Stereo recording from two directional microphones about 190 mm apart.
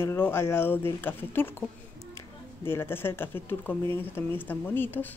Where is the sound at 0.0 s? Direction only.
10° left (ahead or behind).